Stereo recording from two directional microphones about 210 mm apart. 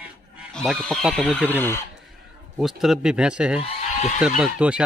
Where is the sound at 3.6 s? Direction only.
35° left (ahead or behind).